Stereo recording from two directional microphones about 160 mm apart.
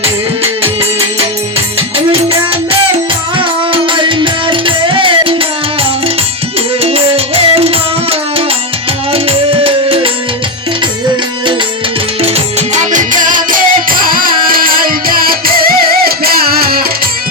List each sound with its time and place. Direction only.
3.3 s music: 30° right (ahead or behind)
6.8 s music: 35° right (ahead or behind)
9.1 s music: 35° right (ahead or behind)
12.2 s music: 45° right (ahead or behind); by 16.8 s 70° right (ahead or behind)